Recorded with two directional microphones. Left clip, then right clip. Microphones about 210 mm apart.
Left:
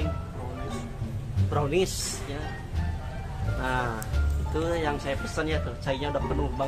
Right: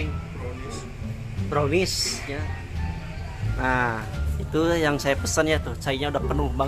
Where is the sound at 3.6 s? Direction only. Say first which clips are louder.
Right 5 dB; 40° right (ahead or behind).